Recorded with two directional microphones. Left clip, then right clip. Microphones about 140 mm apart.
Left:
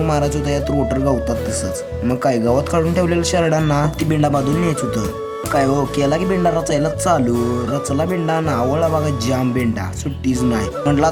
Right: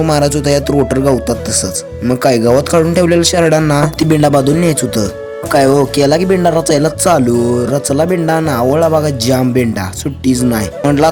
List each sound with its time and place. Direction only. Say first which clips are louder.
0.1 s speech: right 7 dB; 35° right (ahead or behind)